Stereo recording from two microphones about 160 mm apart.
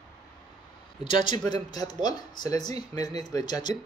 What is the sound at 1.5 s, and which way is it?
Speech, 25° left (ahead or behind).